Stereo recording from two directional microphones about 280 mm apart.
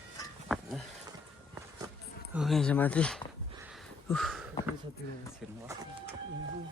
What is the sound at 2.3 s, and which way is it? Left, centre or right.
Speech, centre.